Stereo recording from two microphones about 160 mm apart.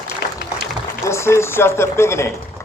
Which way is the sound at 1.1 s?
15° left (ahead or behind).